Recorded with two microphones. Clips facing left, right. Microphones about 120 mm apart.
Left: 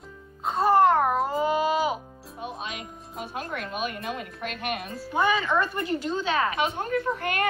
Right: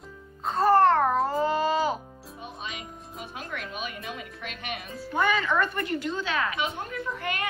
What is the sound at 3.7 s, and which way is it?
Speech, 50° left (ahead or behind).